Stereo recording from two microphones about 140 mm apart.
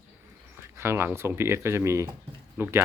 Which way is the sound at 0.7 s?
15° right (ahead or behind).